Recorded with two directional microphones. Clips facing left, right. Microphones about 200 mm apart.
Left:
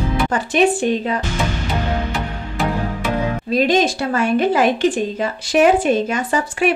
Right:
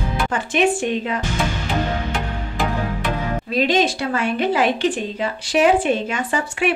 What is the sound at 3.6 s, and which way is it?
A woman's voice, 45° left (ahead or behind).